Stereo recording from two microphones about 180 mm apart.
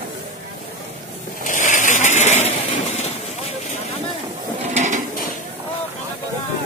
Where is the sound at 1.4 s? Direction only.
45° left (ahead or behind).